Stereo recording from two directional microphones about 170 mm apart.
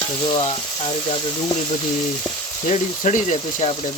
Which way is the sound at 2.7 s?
45° left (ahead or behind).